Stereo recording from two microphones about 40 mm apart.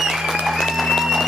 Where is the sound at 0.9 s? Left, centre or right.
Centre.